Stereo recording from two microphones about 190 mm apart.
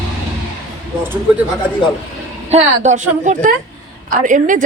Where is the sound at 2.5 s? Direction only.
35° right (ahead or behind).